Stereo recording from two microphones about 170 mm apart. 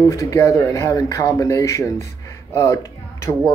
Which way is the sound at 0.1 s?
15° left (ahead or behind).